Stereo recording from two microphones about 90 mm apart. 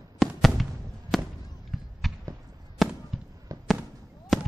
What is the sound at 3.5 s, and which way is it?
Fireworks, 35° right (ahead or behind).